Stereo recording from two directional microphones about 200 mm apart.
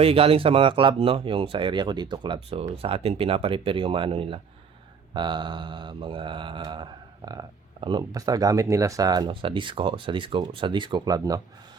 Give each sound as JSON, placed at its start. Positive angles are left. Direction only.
{"t": 0.0, "sound": "mantra", "side_deg": -30}